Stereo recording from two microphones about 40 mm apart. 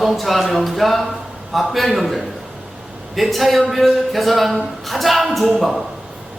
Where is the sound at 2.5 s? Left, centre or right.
Centre.